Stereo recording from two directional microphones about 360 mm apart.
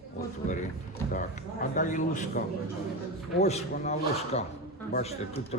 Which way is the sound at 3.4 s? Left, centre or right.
Centre.